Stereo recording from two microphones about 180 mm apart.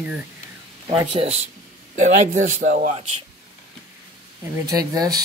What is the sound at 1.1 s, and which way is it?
Speech, 35° right (ahead or behind).